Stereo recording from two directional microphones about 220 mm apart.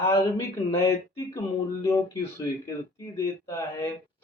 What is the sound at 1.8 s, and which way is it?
Speech, 10° left (ahead or behind).